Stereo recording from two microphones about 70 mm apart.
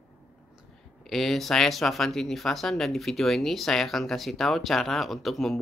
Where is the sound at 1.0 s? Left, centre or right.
Centre.